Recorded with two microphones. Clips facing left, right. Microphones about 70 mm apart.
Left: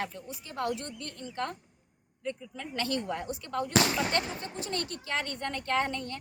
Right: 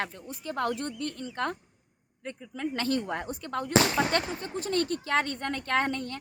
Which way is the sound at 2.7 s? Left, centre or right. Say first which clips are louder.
Right 1 dB; right.